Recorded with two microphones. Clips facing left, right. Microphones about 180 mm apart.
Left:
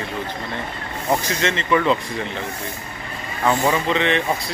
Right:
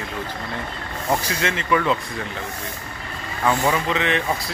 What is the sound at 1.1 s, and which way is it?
Speech, 5° right (ahead or behind).